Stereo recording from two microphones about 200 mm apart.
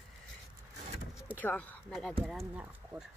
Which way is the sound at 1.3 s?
5° left (ahead or behind).